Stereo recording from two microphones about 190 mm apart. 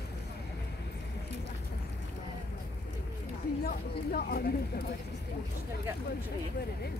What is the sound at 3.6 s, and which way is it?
Speech, 55° left (ahead or behind).